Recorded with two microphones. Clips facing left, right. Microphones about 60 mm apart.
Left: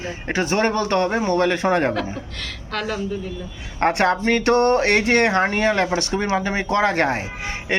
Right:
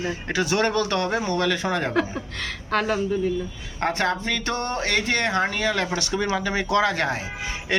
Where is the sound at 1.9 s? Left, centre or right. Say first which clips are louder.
Even; centre.